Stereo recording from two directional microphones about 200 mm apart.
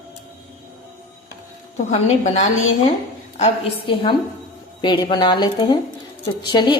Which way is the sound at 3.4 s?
30° left (ahead or behind).